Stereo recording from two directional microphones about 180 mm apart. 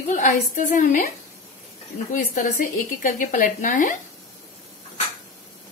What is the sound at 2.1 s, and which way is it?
Speech, 55° left (ahead or behind).